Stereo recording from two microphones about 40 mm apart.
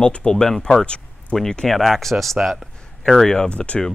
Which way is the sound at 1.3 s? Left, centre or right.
Centre.